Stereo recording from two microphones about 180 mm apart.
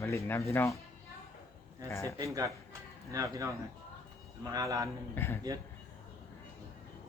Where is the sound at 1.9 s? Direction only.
15° left (ahead or behind).